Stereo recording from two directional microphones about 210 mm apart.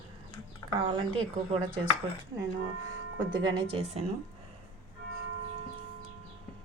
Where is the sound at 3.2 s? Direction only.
20° right (ahead or behind).